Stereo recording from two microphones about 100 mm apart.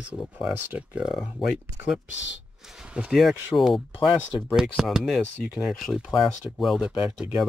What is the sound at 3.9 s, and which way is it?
Speech, 50° left (ahead or behind).